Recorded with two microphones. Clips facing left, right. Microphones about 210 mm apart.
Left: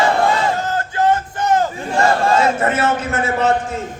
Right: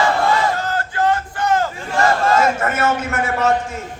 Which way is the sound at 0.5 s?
20° left (ahead or behind).